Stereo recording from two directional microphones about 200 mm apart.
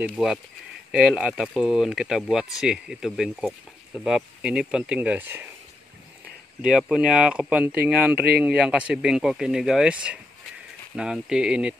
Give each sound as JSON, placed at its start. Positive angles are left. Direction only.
{"t": 0.0, "sound": "speech", "side_deg": -5}
{"t": 6.6, "sound": "speech", "side_deg": -5}